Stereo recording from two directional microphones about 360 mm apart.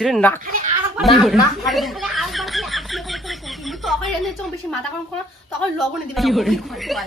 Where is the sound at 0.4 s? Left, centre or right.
Right.